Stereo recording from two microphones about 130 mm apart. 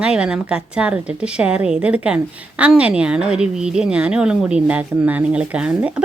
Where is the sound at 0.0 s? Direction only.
5° right (ahead or behind).